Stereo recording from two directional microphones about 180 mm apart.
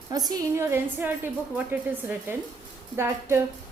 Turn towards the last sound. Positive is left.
turn(degrees=-15)  # may be behind; listen again after turning